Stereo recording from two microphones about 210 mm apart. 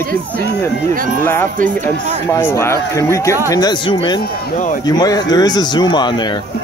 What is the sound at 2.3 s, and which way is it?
Speech, 10° left (ahead or behind).